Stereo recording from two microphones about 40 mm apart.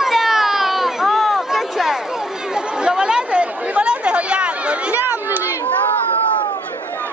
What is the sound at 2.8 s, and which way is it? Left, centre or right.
Chatter, right.